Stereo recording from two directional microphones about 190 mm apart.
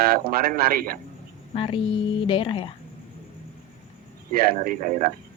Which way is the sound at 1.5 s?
30° left (ahead or behind).